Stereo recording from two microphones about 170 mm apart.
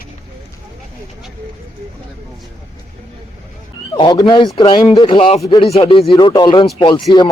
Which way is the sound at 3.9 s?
25° left (ahead or behind).